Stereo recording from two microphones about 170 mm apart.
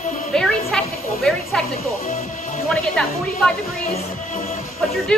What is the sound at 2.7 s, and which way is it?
Speech, 5° left (ahead or behind).